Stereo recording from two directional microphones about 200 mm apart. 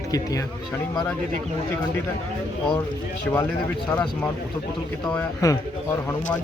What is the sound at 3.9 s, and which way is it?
Speech, 10° left (ahead or behind).